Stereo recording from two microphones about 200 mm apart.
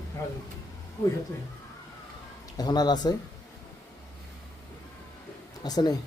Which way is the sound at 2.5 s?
20° left (ahead or behind).